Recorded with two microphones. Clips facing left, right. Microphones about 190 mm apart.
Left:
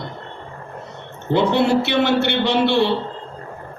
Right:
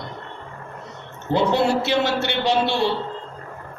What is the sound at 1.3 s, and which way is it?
A man's voice, 60° left (ahead or behind).